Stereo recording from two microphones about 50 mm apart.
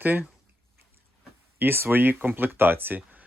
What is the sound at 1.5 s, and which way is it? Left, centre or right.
Speech, right.